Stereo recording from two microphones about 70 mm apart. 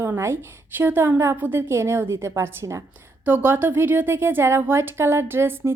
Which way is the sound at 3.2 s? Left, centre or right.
Right.